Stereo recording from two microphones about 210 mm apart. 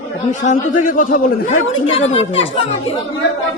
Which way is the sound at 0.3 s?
40° left (ahead or behind).